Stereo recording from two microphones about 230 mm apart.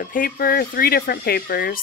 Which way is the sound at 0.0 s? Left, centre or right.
Left.